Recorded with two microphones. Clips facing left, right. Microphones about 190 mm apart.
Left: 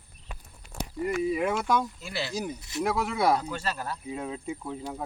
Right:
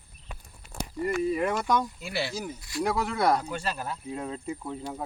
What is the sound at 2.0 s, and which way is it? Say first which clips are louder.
Speech: right 2 dB; 15° right (ahead or behind).